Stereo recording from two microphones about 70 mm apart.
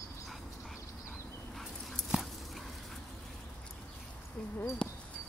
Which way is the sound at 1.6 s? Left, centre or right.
Centre.